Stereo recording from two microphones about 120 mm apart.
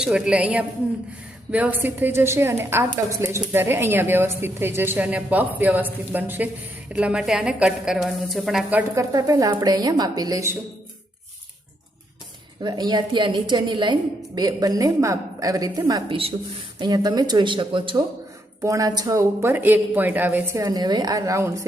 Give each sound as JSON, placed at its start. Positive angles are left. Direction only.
{"t": 0.0, "sound": "a woman's voice", "side_deg": -10}
{"t": 9.0, "sound": "a woman's voice", "side_deg": -30}
{"t": 12.6, "sound": "a woman's voice", "side_deg": -35}
{"t": 16.0, "sound": "a woman's voice", "side_deg": -50}
{"t": 16.8, "sound": "a woman's voice", "side_deg": -35}
{"t": 18.6, "sound": "speech", "side_deg": -25}
{"t": 20.6, "sound": "speech", "side_deg": -30}